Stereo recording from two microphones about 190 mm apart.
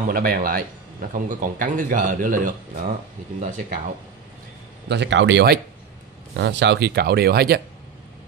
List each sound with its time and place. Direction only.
0.1 s a man's voice: 50° right (ahead or behind)
4.8 s speech: 65° right (ahead or behind)